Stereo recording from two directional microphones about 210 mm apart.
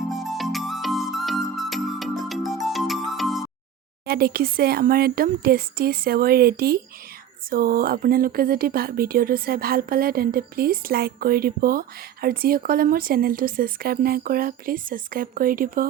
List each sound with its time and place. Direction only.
0.1 s music: centre (ahead or behind)
4.0 s speech: 45° right (ahead or behind)